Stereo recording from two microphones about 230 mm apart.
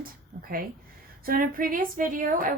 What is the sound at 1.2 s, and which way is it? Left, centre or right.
A woman's voice, right.